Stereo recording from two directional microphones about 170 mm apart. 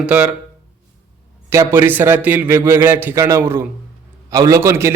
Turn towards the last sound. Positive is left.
turn(degrees=-15)  # may be behind; listen again after turning